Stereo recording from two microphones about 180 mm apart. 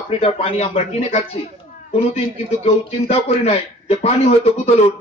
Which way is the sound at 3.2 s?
30° left (ahead or behind).